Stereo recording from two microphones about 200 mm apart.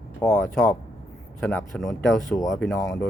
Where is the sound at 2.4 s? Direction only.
15° left (ahead or behind).